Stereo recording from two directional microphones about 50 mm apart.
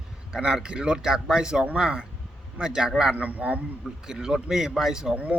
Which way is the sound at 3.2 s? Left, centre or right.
Right.